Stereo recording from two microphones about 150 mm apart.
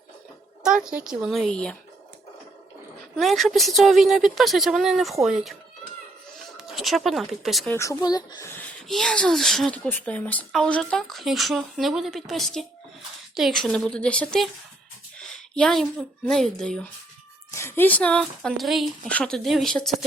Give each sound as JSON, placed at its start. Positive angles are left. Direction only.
{"t": 0.6, "sound": "speech", "side_deg": -5}
{"t": 3.2, "sound": "speech", "side_deg": 0}
{"t": 6.6, "sound": "speech", "side_deg": 0}
{"t": 7.7, "sound": "speech", "side_deg": 20}
{"t": 8.9, "sound": "a woman's voice", "side_deg": 5}
{"t": 17.5, "sound": "speech", "side_deg": 15}